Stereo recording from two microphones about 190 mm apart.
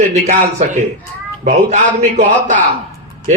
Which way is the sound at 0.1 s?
40° right (ahead or behind).